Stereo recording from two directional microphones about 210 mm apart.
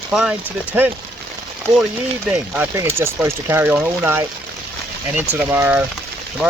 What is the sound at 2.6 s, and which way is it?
Speech, 10° right (ahead or behind).